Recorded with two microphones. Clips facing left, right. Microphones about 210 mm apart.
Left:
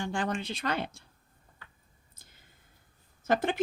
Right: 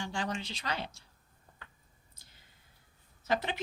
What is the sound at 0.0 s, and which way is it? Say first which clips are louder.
Speech: left 4 dB; 55° left (ahead or behind).